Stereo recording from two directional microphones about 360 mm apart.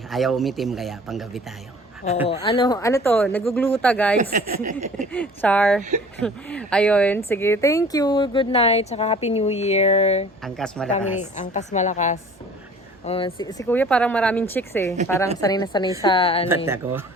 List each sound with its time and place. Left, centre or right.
0.1 s speech: centre
2.2 s speech: centre
4.2 s speech: right
5.1 s speech: centre
10.4 s speech: centre
10.9 s a woman's voice: centre
16.6 s speech: centre